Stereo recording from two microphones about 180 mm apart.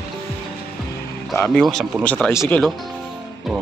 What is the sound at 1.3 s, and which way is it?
Speech, 5° left (ahead or behind).